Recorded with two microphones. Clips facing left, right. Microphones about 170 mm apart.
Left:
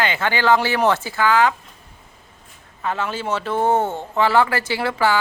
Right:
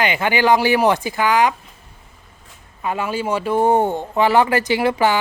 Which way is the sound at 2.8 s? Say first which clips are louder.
Right 2 dB; 10° right (ahead or behind).